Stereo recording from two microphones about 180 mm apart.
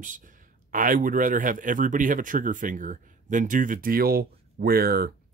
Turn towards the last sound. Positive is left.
turn(degrees=-55)  # may be behind; listen again after turning